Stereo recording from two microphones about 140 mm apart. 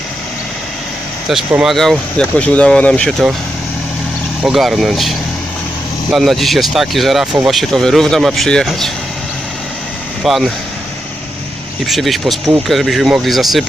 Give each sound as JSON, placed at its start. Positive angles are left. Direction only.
{"t": 1.3, "sound": "speech", "side_deg": 0}
{"t": 4.4, "sound": "speech", "side_deg": 0}
{"t": 10.2, "sound": "speech", "side_deg": 0}
{"t": 11.9, "sound": "speech", "side_deg": 0}